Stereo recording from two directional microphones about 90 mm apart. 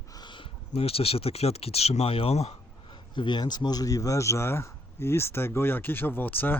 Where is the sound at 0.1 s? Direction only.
55° left (ahead or behind); by 2.3 s 90° left.